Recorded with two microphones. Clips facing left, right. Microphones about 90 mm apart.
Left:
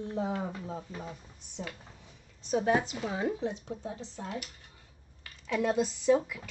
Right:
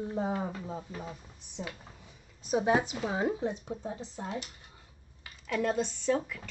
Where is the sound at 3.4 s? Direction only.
10° right (ahead or behind).